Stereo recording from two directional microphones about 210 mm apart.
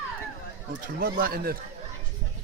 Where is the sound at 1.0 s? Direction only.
45° right (ahead or behind).